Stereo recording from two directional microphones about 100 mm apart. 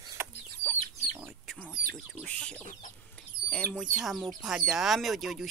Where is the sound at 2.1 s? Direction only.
10° left (ahead or behind).